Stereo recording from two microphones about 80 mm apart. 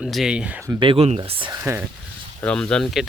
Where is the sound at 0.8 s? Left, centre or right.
Right.